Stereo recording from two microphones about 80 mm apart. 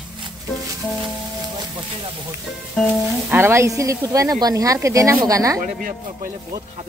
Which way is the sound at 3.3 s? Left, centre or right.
Right.